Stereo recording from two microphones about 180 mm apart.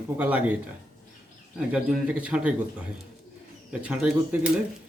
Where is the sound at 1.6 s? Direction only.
5° right (ahead or behind).